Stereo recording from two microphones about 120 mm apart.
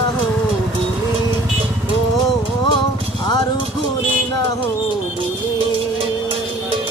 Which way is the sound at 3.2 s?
35° left (ahead or behind).